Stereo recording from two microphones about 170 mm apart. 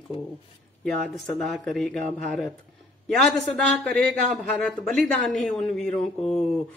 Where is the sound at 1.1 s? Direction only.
Centre (ahead or behind).